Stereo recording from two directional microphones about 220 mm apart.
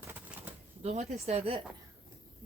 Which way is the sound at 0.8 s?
30° right (ahead or behind).